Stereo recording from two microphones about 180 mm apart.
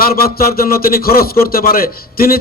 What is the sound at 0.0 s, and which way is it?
A man's voice, 55° left (ahead or behind).